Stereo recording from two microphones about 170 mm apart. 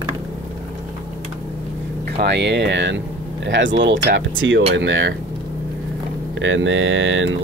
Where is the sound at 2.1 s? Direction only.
85° right.